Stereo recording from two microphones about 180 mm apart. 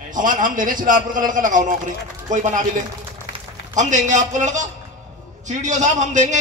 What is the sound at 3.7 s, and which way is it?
A man's voice, 45° right (ahead or behind).